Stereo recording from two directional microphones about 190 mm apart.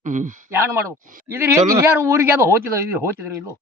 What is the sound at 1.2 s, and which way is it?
Speech, 15° right (ahead or behind).